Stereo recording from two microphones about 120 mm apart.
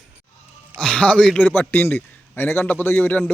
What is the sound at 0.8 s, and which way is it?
A man's voice, 10° left (ahead or behind).